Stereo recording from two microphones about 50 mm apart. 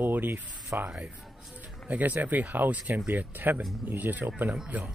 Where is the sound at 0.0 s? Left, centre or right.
Right.